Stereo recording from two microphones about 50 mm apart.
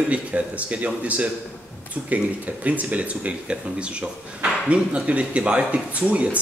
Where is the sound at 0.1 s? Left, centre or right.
Right.